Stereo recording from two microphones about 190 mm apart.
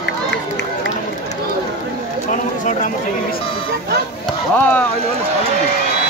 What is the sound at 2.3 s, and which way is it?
Run, 40° left (ahead or behind).